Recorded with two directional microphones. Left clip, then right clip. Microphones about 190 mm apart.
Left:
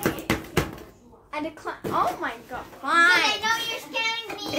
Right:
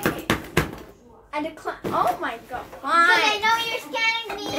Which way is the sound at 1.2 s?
25° left (ahead or behind).